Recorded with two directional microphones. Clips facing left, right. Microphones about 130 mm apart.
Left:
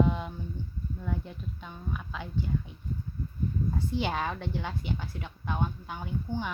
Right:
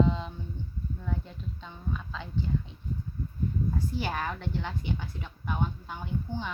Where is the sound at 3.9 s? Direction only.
15° left (ahead or behind).